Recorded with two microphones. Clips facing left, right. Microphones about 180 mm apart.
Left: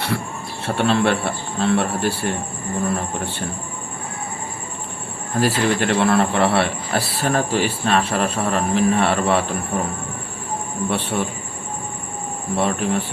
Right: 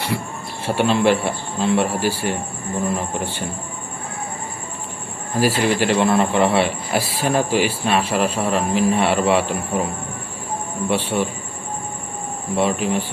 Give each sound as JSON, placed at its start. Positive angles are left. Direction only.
{"t": 0.6, "sound": "speech", "side_deg": -10}
{"t": 5.4, "sound": "speech", "side_deg": -10}
{"t": 5.8, "sound": "speech", "side_deg": 60}
{"t": 6.1, "sound": "speech", "side_deg": -15}
{"t": 10.8, "sound": "speech", "side_deg": -10}
{"t": 12.5, "sound": "speech", "side_deg": -15}